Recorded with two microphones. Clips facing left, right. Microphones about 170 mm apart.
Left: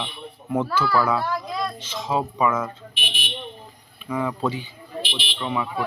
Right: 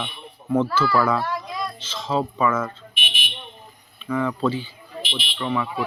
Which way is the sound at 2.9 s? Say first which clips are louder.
Even; 35° left (ahead or behind).